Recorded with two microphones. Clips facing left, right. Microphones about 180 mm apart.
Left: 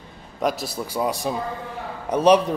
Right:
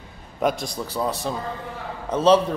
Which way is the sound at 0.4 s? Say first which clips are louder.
Right 1 dB; centre (ahead or behind).